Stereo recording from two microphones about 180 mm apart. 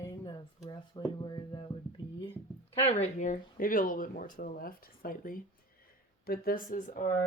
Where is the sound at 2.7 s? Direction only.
35° left (ahead or behind).